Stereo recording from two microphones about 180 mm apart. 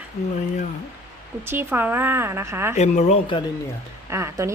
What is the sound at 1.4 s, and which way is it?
Speech, 10° right (ahead or behind).